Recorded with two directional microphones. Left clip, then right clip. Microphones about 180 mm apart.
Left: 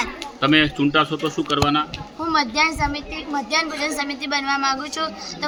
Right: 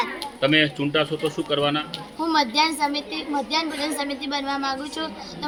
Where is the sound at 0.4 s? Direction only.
65° left (ahead or behind).